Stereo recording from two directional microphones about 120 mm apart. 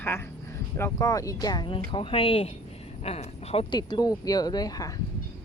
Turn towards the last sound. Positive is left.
turn(degrees=30)  # may be behind; listen again after turning